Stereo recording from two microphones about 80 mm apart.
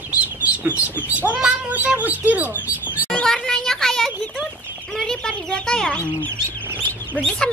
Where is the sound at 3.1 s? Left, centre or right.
Centre.